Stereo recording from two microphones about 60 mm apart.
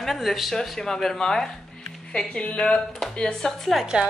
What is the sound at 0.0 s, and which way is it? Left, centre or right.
Speech, centre.